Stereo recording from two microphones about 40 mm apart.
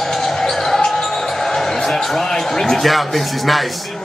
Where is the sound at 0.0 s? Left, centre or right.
Centre.